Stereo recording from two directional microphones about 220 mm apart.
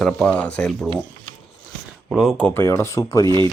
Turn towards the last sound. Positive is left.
turn(degrees=15)  # may be behind; listen again after turning